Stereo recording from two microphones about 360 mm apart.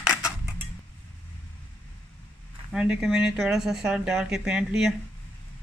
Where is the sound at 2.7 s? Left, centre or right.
Centre.